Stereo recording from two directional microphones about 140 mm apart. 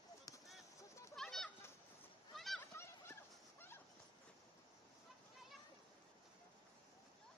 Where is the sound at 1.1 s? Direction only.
5° left (ahead or behind).